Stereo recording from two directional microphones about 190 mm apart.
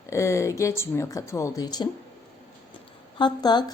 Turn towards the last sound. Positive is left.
turn(degrees=20)  # may be behind; listen again after turning